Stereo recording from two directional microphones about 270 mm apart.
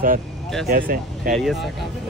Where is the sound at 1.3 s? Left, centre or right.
Centre.